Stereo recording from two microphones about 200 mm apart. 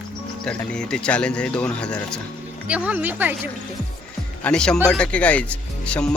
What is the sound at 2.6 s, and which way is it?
Speech, 5° right (ahead or behind).